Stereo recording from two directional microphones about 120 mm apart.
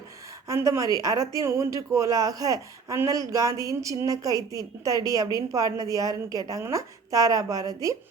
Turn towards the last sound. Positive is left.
turn(degrees=-30)  # may be behind; listen again after turning